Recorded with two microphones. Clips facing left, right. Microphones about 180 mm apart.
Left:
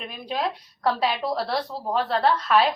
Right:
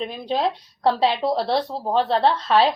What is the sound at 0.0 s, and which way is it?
A woman's voice, 30° right (ahead or behind).